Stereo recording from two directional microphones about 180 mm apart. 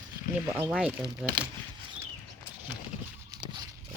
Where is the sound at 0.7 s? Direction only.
5° right (ahead or behind).